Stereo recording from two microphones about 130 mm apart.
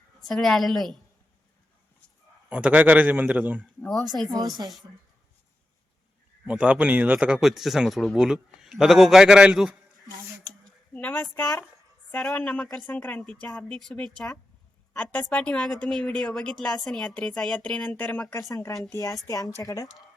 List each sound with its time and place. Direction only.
0.3 s speech: 5° left (ahead or behind)
2.5 s a man's voice: 10° right (ahead or behind)
3.8 s speech: 5° left (ahead or behind)
4.4 s a woman's voice: 30° right (ahead or behind)
6.4 s speech: 10° right (ahead or behind)
10.9 s a woman's voice: 15° left (ahead or behind)
18.3 s a woman's voice: 25° left (ahead or behind)